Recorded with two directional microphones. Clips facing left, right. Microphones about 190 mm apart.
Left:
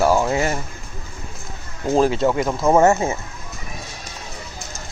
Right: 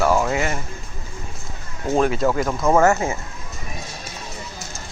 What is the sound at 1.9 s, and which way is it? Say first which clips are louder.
Speech: left 2 dB; 30° left (ahead or behind).